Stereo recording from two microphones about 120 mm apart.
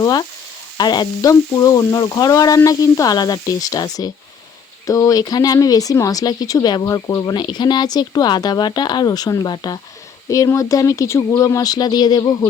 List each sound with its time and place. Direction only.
0.0 s speech: 30° left (ahead or behind)